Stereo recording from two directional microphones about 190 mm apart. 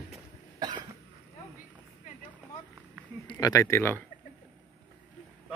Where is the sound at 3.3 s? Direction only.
20° left (ahead or behind).